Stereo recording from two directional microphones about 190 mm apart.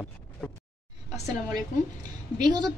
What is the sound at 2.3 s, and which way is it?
Speech, 20° right (ahead or behind).